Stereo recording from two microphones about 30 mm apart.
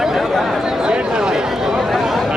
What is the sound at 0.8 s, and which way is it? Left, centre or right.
Speech, right.